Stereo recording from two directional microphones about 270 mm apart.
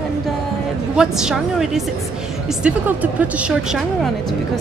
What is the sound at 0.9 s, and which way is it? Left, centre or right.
Speech, centre.